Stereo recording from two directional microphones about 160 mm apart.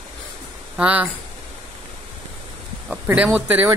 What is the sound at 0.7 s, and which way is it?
Speech, 10° right (ahead or behind).